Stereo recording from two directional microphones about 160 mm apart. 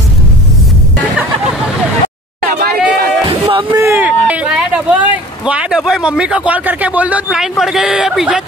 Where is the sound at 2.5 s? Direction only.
85° right.